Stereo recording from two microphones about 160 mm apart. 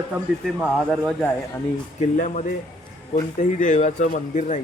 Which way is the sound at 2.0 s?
50° left (ahead or behind).